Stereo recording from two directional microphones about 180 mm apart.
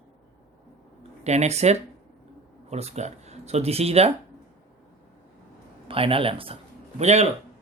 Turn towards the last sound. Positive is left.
turn(degrees=-35)  # may be behind; listen again after turning